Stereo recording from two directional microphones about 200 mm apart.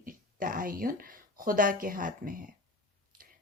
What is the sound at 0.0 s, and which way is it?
Speech, 45° right (ahead or behind).